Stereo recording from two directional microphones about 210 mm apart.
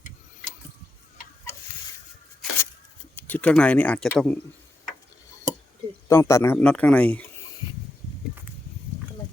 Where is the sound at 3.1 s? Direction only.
10° left (ahead or behind).